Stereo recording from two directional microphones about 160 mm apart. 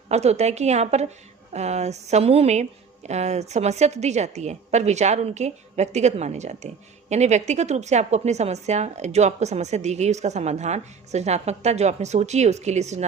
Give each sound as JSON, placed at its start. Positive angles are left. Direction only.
{"t": 0.1, "sound": "a woman's voice", "side_deg": -45}